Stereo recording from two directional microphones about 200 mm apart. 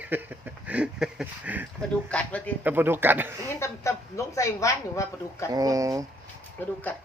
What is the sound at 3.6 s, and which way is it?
Speech, 15° left (ahead or behind).